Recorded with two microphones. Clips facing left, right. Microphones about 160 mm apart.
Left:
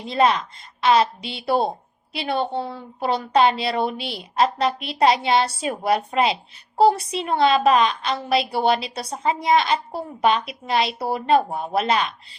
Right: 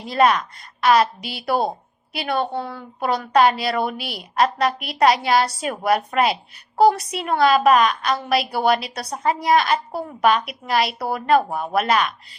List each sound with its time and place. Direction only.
0.1 s a woman's voice: 25° left (ahead or behind)